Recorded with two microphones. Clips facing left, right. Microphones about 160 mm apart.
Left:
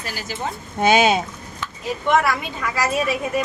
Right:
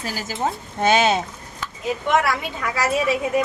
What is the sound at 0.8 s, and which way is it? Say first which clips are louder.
Speech: left 1 dB; 10° left (ahead or behind).